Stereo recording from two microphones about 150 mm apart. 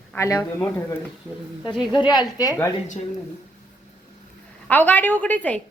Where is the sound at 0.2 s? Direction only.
25° left (ahead or behind).